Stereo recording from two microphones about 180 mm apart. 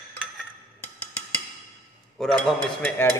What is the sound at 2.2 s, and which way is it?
Speech, 5° left (ahead or behind).